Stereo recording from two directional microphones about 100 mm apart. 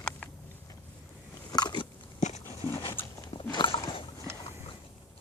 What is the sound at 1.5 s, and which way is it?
Biting, 45° left (ahead or behind).